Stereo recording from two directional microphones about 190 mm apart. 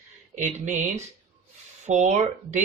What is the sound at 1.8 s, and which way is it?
Speech, 40° right (ahead or behind).